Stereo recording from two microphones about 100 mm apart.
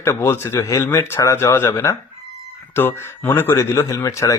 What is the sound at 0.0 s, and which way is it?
A man's voice, 25° left (ahead or behind).